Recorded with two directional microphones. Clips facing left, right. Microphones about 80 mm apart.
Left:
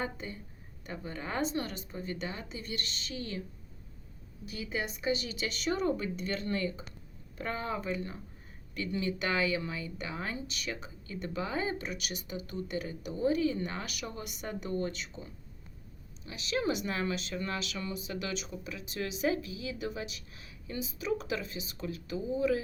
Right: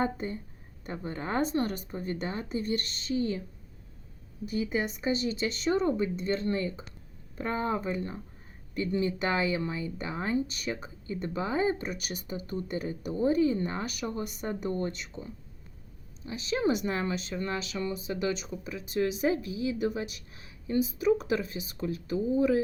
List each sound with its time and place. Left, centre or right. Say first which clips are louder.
0.0 s speech: right 7 dB; right
3.2 s speech: right 9 dB; centre
4.6 s speech: right 2 dB; right
11.8 s speech: right 3 dB; right
15.1 s speech: right 4 dB; right
16.2 s speech: right 4 dB; right